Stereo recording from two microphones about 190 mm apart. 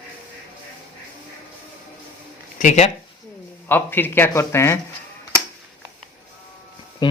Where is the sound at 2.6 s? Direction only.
40° left (ahead or behind).